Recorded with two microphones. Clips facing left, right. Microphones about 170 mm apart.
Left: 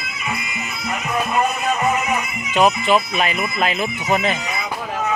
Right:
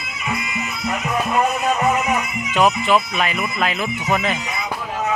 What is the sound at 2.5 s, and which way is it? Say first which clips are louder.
Speech: left 1 dB; 25° left (ahead or behind).